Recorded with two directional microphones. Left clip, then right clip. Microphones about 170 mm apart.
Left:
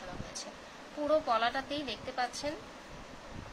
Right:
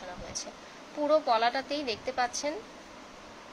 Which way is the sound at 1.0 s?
25° right (ahead or behind).